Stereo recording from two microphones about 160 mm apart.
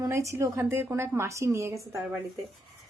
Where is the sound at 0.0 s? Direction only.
20° right (ahead or behind).